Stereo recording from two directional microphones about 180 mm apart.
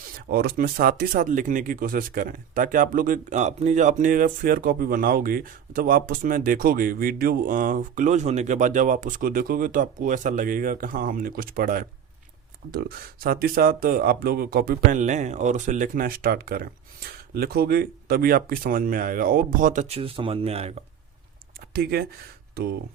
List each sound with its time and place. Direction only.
0.3 s speech: 60° right (ahead or behind); by 20.7 s 35° right (ahead or behind)
21.7 s speech: 60° right (ahead or behind)